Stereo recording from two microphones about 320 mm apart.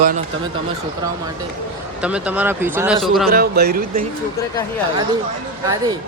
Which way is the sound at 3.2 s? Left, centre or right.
Right.